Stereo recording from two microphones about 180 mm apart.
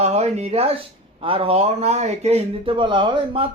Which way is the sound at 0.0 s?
35° right (ahead or behind).